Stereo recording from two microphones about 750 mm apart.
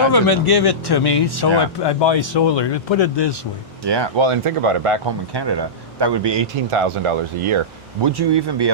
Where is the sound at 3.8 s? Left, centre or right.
Right.